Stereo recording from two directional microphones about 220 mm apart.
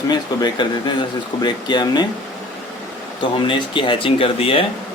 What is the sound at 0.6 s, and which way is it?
Speech, 20° left (ahead or behind).